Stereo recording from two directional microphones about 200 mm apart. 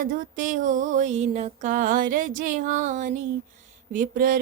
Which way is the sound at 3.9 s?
40° right (ahead or behind).